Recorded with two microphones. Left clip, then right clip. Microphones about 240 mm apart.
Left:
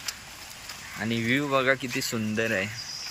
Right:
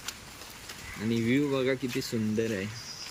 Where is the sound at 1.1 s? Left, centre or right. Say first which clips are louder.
Left 2 dB; centre.